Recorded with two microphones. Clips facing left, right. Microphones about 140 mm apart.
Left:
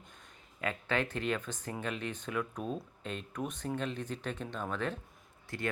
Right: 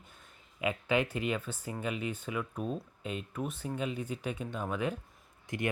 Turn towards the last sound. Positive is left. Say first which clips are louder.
# right 3 dB
turn(degrees=-20)  # may be behind; listen again after turning